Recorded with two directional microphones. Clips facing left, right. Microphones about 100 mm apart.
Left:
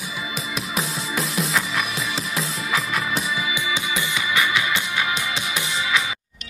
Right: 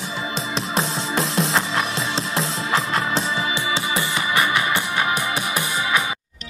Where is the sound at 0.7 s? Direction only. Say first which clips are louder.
Right 4 dB; 75° right (ahead or behind).